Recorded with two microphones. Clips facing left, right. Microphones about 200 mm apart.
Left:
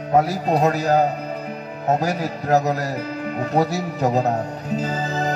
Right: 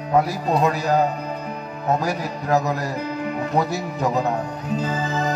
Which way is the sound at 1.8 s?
40° left (ahead or behind).